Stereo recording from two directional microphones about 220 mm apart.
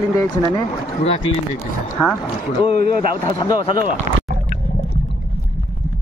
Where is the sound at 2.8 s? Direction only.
45° right (ahead or behind).